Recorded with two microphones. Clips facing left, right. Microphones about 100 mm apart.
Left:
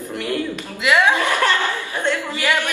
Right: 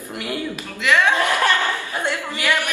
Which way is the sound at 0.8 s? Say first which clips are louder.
Left 1 dB; 15° left (ahead or behind).